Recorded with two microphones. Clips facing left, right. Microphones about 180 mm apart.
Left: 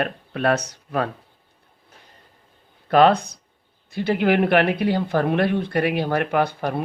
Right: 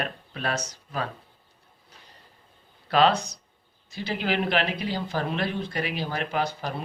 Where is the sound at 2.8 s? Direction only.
50° left (ahead or behind).